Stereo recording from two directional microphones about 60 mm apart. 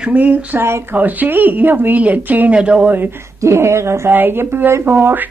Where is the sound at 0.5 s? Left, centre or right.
Right.